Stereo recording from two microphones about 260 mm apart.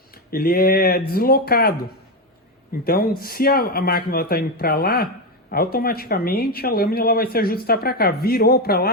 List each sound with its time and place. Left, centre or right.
0.3 s speech: left
2.8 s speech: left